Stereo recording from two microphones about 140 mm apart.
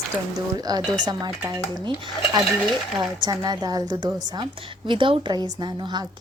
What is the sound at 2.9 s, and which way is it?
A woman's voice, 30° right (ahead or behind).